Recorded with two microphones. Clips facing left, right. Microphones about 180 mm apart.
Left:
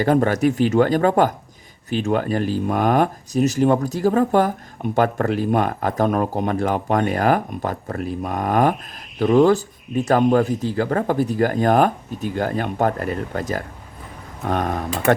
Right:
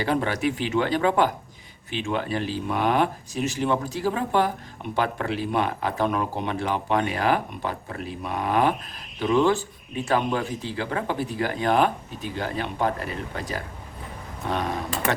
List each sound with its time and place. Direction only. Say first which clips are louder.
0.0 s speech: left 7 dB; 45° left (ahead or behind)